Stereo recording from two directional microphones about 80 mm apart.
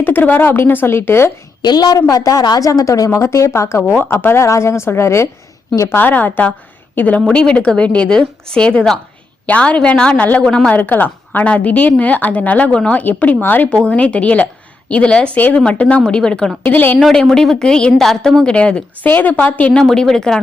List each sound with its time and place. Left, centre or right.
0.0 s a woman's voice: left
1.6 s speech: left
3.9 s a woman's voice: left
4.4 s speech: left
6.0 s a woman's voice: left
10.8 s a woman's voice: left
16.6 s a woman's voice: left
17.0 s a woman's voice: centre
19.8 s a woman's voice: centre